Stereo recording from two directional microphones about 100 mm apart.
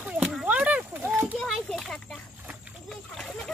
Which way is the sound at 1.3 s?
Centre (ahead or behind).